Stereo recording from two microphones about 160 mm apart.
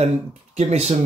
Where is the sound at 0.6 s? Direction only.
45° right (ahead or behind).